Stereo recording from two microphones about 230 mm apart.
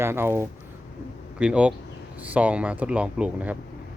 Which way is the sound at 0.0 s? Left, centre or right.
Centre.